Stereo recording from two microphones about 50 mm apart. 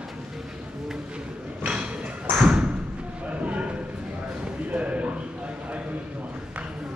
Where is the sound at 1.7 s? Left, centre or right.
Right.